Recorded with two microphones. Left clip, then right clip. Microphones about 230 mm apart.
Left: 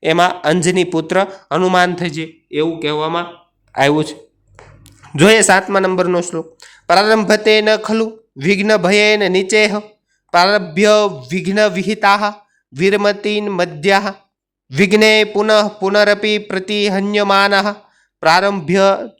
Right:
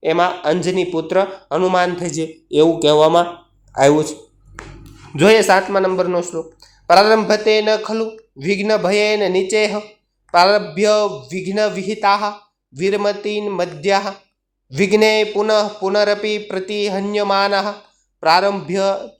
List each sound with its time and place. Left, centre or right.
0.0 s speech: left
2.8 s speech: left
3.7 s speech: left